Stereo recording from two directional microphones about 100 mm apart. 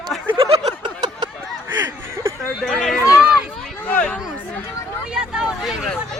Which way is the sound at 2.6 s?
5° left (ahead or behind).